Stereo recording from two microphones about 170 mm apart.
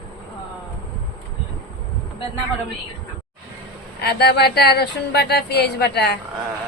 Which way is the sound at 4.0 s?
70° left (ahead or behind).